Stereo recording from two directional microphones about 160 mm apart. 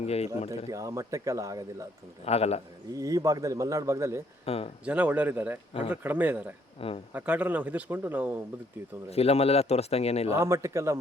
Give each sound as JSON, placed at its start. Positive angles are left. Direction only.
{"t": 0.0, "sound": "speech", "side_deg": 40}
{"t": 0.7, "sound": "a man's voice", "side_deg": -20}
{"t": 2.2, "sound": "speech", "side_deg": 40}
{"t": 2.9, "sound": "a man's voice", "side_deg": -20}
{"t": 4.4, "sound": "speech", "side_deg": 40}
{"t": 4.9, "sound": "speech", "side_deg": -10}
{"t": 6.7, "sound": "speech", "side_deg": 35}
{"t": 7.1, "sound": "speech", "side_deg": -10}
{"t": 9.0, "sound": "speech", "side_deg": 40}
{"t": 10.3, "sound": "speech", "side_deg": -20}